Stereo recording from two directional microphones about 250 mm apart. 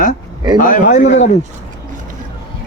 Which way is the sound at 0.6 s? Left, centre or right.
Left.